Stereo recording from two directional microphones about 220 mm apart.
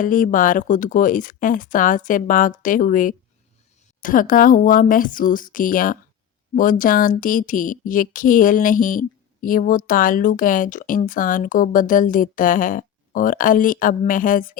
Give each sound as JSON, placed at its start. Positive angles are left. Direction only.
{"t": 0.0, "sound": "speech", "side_deg": 35}